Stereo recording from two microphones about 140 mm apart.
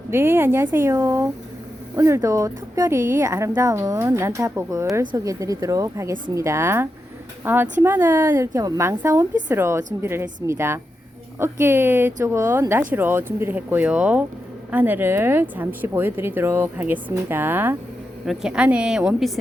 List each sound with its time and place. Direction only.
0.1 s a woman's voice: 15° right (ahead or behind)